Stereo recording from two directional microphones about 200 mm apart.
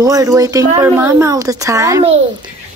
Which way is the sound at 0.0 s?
15° right (ahead or behind).